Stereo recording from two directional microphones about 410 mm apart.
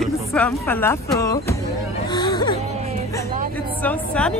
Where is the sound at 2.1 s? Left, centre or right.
Centre.